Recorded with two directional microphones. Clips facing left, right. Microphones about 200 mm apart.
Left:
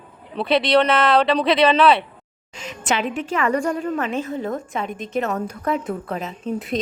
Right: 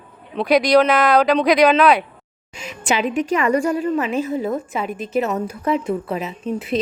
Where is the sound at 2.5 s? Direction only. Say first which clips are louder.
Right 2 dB; 10° right (ahead or behind).